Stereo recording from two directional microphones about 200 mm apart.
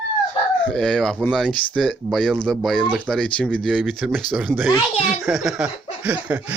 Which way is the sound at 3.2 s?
5° left (ahead or behind).